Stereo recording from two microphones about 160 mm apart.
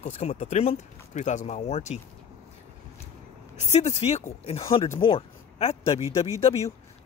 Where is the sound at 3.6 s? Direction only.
45° left (ahead or behind).